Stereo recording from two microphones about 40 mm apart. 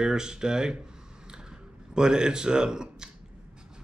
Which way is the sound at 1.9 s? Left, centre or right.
Centre.